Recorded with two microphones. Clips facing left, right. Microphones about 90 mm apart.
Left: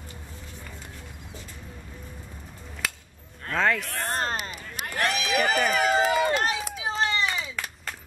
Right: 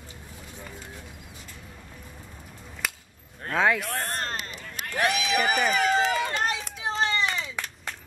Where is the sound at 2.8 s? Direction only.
5° right (ahead or behind).